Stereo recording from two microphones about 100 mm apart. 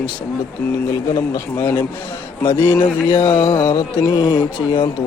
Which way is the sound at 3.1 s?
50° left (ahead or behind).